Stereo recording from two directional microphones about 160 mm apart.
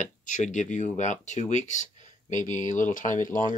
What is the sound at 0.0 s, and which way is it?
Speech, 50° left (ahead or behind).